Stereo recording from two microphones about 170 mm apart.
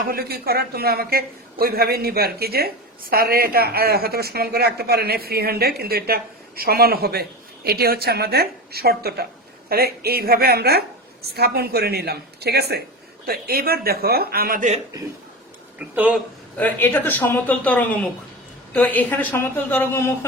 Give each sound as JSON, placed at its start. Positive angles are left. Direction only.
{"t": 0.1, "sound": "a man's voice", "side_deg": -65}
{"t": 16.0, "sound": "a man's voice", "side_deg": -10}
{"t": 16.6, "sound": "speech", "side_deg": 10}